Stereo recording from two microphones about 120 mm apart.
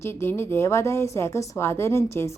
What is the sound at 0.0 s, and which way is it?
A woman's voice, 20° left (ahead or behind).